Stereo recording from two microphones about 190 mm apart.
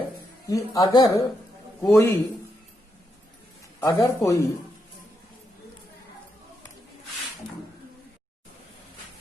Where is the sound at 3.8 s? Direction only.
15° left (ahead or behind).